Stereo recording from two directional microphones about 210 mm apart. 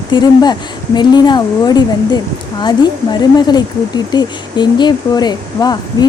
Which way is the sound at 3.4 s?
20° left (ahead or behind).